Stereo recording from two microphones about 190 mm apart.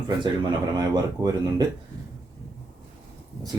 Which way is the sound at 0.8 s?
20° right (ahead or behind).